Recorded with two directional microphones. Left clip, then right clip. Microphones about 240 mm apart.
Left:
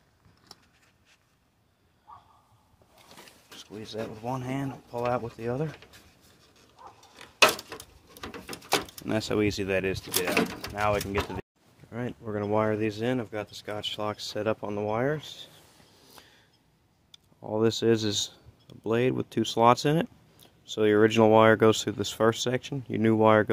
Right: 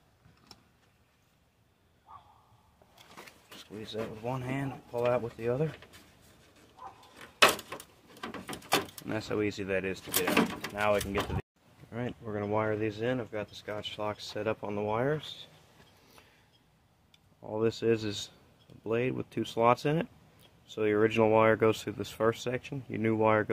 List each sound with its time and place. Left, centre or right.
3.5 s speech: centre
9.0 s speech: left
11.9 s speech: centre
12.4 s speech: left
16.2 s a sound: left
17.1 s speech: left